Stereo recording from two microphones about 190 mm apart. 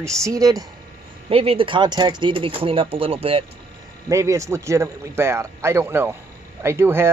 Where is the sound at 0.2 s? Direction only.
20° right (ahead or behind).